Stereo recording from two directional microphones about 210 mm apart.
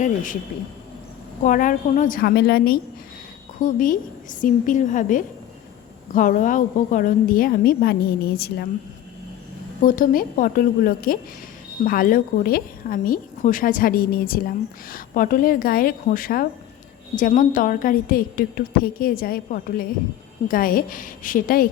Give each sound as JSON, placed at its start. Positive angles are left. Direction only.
{"t": 0.0, "sound": "a woman's voice", "side_deg": 40}
{"t": 1.4, "sound": "a woman's voice", "side_deg": 40}
{"t": 9.8, "sound": "a woman's voice", "side_deg": 40}